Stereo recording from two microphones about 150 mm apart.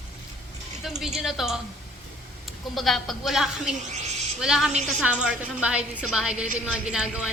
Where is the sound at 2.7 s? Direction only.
Centre (ahead or behind).